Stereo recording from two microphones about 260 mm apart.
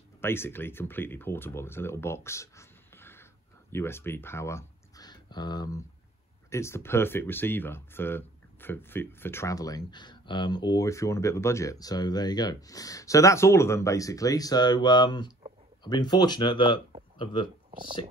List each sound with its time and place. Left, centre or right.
0.2 s speech: centre